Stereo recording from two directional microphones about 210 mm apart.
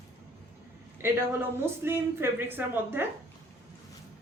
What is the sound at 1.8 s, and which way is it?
Speech, 10° right (ahead or behind).